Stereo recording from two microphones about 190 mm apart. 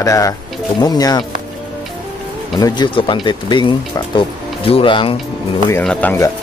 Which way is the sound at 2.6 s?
25° left (ahead or behind).